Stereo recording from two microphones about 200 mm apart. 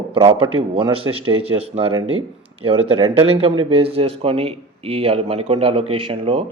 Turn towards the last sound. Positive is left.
turn(degrees=-30)  # may be behind; listen again after turning